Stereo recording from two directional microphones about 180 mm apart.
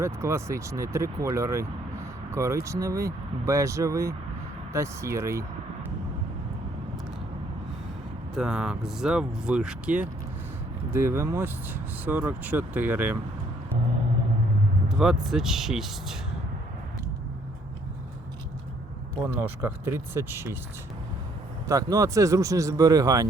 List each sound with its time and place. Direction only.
0.0 s speech: 15° right (ahead or behind)
8.4 s speech: 5° right (ahead or behind)
14.8 s speech: 5° right (ahead or behind)
19.2 s speech: 10° right (ahead or behind)
21.7 s speech: 20° right (ahead or behind)